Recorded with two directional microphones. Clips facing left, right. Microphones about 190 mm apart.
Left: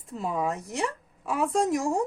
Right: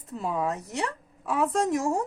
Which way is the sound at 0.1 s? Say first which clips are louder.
Even; centre (ahead or behind).